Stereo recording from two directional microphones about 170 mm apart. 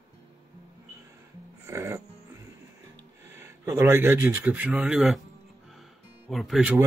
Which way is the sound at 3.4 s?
15° right (ahead or behind).